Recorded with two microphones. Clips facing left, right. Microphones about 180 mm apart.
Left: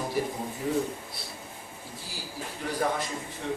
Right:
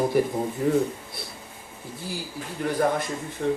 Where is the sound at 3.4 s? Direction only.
50° right (ahead or behind).